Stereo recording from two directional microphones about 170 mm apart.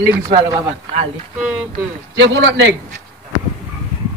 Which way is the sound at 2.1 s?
90° right.